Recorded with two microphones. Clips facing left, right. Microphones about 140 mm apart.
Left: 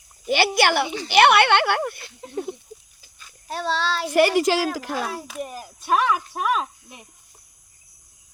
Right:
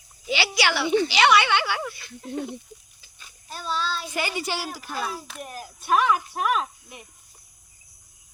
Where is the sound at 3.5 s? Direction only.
80° left.